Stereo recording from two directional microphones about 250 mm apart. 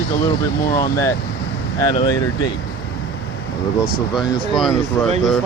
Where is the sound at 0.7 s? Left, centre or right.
Centre.